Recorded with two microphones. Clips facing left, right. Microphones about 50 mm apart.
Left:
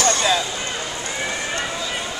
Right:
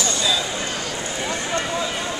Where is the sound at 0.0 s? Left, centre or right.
Left.